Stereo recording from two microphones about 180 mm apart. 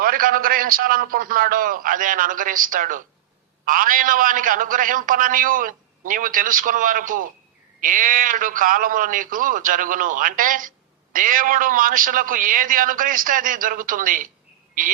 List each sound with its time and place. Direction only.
0.0 s a man's voice: 50° right (ahead or behind)